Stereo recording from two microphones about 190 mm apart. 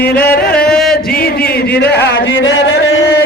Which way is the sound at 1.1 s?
55° left (ahead or behind).